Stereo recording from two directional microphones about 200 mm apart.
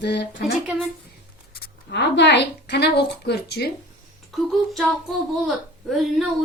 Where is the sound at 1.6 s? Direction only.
60° left (ahead or behind).